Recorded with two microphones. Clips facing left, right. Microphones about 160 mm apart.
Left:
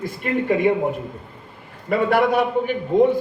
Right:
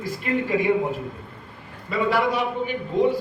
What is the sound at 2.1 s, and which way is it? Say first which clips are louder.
Speech: left 5 dB; 55° left (ahead or behind).